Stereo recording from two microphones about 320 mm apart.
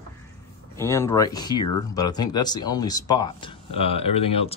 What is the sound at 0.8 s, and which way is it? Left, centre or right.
Speech, centre.